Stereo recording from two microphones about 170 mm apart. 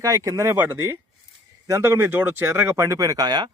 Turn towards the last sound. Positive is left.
turn(degrees=-25)  # may be behind; listen again after turning